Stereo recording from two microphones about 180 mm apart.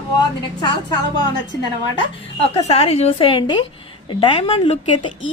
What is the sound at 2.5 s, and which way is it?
A woman's voice, 35° left (ahead or behind).